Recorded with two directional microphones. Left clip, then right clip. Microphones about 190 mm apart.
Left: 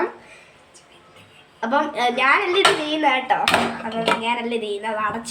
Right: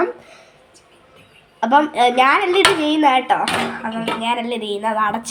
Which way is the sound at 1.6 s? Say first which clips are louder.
Right 6 dB; 30° right (ahead or behind).